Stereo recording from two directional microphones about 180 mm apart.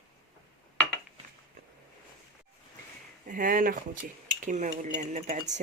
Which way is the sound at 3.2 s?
50° right (ahead or behind).